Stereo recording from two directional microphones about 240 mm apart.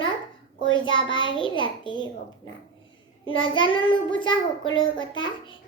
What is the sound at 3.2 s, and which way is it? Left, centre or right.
A child's voice, left.